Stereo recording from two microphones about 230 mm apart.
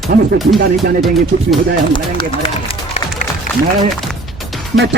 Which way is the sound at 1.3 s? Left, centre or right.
Right.